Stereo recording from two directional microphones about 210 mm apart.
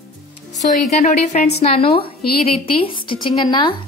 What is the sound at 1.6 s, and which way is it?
Speech, 25° left (ahead or behind).